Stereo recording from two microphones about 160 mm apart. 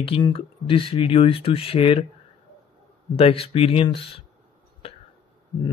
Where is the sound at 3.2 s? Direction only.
35° left (ahead or behind).